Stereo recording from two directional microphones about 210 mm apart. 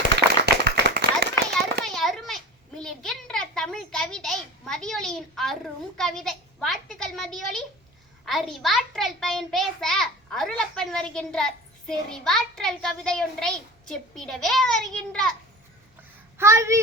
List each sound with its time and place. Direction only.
0.4 s clapping: 50° right (ahead or behind)
1.8 s a sound: centre (ahead or behind)
8.2 s a child's voice: centre (ahead or behind)
16.4 s a child's voice: 15° right (ahead or behind)